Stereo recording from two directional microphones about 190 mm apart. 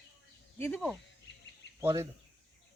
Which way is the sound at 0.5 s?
10° left (ahead or behind).